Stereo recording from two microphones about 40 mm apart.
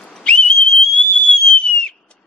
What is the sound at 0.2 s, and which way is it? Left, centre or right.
Whistle, left.